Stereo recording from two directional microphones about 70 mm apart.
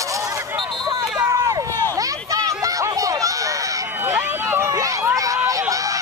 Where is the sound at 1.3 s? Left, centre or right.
Right.